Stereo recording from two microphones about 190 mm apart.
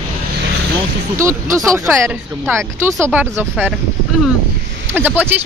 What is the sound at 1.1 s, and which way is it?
Speech, 15° right (ahead or behind).